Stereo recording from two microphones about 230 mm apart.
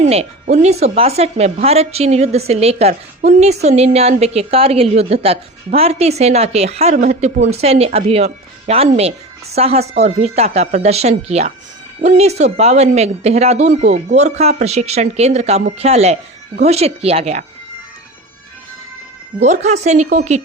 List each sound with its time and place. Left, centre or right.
0.0 s a woman's voice: right
19.4 s a woman's voice: right